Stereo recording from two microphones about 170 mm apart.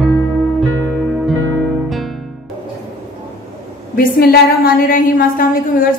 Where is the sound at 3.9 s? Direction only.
60° left (ahead or behind).